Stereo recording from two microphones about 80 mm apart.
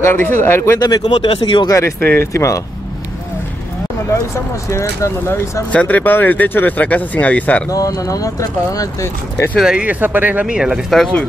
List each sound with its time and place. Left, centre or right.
0.0 s speech: left
1.0 s speech: left
1.7 s speech: left
4.6 s speech: left
5.7 s speech: centre
7.7 s speech: left
9.6 s speech: centre
9.8 s speech: right
10.4 s speech: centre